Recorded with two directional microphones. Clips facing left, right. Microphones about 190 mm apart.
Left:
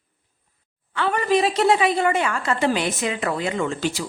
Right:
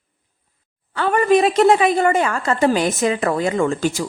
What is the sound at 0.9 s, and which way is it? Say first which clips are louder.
A woman's voice: right 5 dB; 45° right (ahead or behind).